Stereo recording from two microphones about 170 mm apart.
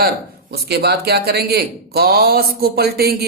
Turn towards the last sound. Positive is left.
turn(degrees=-65)  # may be behind; listen again after turning